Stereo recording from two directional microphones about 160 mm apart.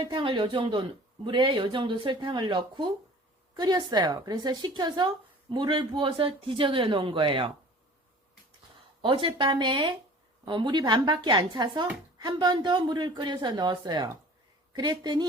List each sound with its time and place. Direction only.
0.0 s a woman's voice: 30° right (ahead or behind)
9.0 s speech: 30° right (ahead or behind)